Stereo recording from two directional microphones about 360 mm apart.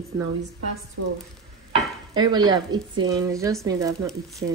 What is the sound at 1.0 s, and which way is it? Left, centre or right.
Speech, right.